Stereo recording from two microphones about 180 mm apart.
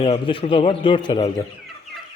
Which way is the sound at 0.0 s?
25° left (ahead or behind).